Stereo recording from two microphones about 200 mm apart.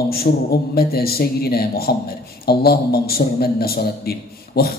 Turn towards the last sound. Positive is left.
turn(degrees=50)  # may be behind; listen again after turning